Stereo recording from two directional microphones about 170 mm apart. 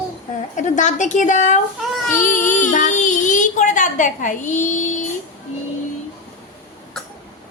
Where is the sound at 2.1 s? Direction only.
10° left (ahead or behind).